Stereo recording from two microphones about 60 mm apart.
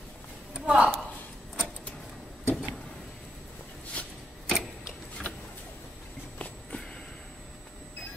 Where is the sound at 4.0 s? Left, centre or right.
Left.